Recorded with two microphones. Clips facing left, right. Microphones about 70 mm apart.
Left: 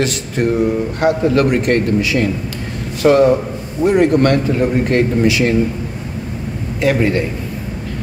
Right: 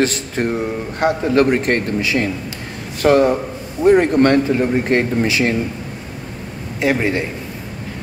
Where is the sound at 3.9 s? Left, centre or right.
Right.